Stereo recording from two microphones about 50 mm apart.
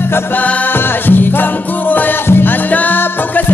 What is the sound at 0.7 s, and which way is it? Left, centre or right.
Music, left.